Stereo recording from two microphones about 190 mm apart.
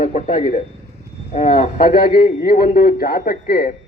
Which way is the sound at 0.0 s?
40° left (ahead or behind).